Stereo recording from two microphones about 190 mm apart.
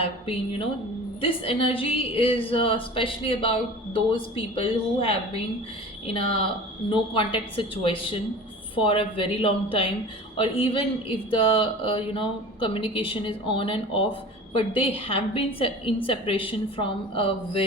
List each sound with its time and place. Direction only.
0.0 s speech: 30° left (ahead or behind)
6.9 s speech: 25° left (ahead or behind)